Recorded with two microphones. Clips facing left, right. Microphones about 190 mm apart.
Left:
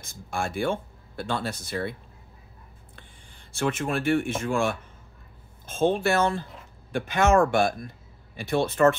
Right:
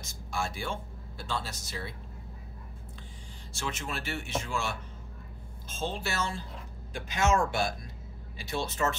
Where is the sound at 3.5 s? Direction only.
55° left (ahead or behind).